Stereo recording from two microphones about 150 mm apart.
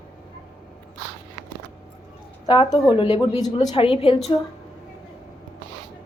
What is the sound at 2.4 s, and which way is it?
Speech, 30° left (ahead or behind).